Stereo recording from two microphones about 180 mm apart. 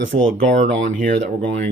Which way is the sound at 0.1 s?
50° right (ahead or behind).